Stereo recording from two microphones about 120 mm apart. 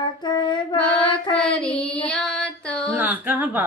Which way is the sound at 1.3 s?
5° left (ahead or behind).